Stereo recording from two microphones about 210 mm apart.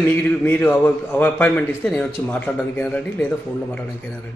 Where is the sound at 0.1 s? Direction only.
5° left (ahead or behind).